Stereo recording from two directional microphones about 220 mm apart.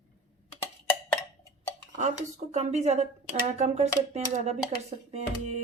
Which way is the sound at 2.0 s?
30° right (ahead or behind).